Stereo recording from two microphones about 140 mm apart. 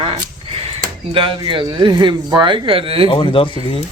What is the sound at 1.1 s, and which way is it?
Speech, 40° right (ahead or behind).